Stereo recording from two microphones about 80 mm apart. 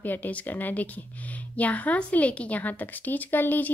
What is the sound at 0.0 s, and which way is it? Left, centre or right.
Speech, left.